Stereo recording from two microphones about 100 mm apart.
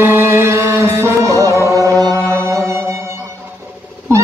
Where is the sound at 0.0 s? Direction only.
25° right (ahead or behind).